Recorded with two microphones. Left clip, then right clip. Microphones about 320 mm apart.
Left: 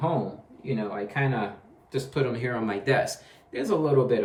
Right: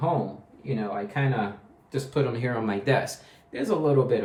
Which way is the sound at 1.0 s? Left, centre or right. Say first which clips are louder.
Even; centre.